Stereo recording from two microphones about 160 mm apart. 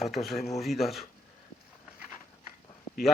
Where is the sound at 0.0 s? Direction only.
Centre (ahead or behind).